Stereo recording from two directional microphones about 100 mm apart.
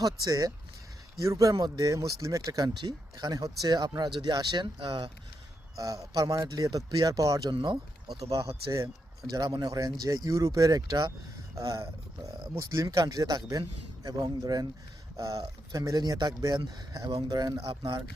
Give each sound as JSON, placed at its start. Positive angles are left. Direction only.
{"t": 0.0, "sound": "speech", "side_deg": -35}
{"t": 5.7, "sound": "speech", "side_deg": -35}
{"t": 7.5, "sound": "speech", "side_deg": -50}
{"t": 9.3, "sound": "speech", "side_deg": -40}
{"t": 17.7, "sound": "speech", "side_deg": -50}